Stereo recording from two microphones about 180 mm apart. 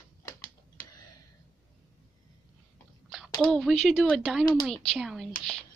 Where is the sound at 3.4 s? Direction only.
Centre (ahead or behind).